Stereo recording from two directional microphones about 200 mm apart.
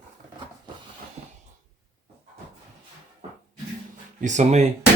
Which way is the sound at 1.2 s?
30° right (ahead or behind).